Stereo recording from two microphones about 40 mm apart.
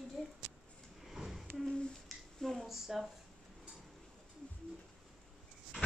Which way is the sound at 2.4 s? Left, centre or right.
Centre.